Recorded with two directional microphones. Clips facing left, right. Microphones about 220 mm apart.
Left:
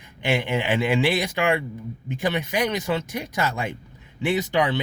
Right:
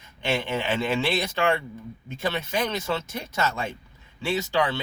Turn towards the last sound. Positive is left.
turn(degrees=20)  # may be behind; listen again after turning